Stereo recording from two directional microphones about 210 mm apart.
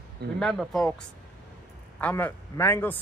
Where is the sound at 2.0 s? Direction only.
10° left (ahead or behind).